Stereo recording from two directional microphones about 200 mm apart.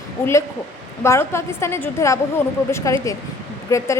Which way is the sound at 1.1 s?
15° left (ahead or behind).